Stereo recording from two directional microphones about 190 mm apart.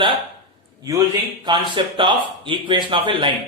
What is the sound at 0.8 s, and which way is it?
A man's voice, 20° right (ahead or behind).